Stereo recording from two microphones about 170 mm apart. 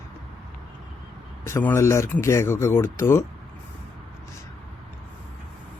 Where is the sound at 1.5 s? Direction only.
15° left (ahead or behind).